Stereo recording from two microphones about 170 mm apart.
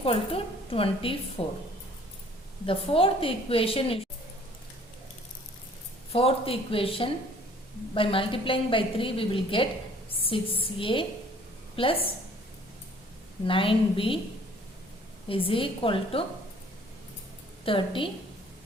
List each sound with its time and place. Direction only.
0.0 s a woman's voice: 35° left (ahead or behind)
2.6 s a woman's voice: 30° left (ahead or behind)
6.1 s a woman's voice: 35° left (ahead or behind)
13.4 s a woman's voice: 30° left (ahead or behind)
15.3 s a woman's voice: 30° left (ahead or behind)
17.7 s a woman's voice: 30° left (ahead or behind)